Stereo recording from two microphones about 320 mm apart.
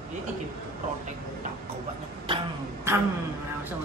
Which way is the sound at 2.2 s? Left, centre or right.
Centre.